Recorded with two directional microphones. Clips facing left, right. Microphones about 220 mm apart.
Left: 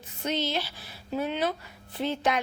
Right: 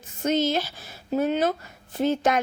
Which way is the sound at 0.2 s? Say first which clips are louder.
Right 6 dB; 45° right (ahead or behind).